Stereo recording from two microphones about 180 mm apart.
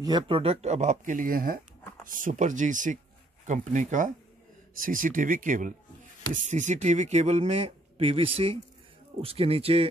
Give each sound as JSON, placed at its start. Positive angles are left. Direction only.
{"t": 0.0, "sound": "speech", "side_deg": -25}